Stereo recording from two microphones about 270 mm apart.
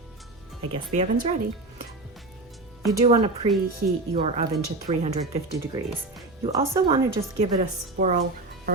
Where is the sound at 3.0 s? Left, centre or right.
Right.